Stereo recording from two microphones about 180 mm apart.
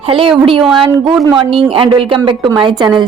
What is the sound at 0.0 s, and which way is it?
Speech, 30° right (ahead or behind).